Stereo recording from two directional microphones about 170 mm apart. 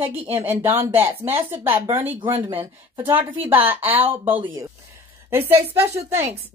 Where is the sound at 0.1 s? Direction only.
10° right (ahead or behind).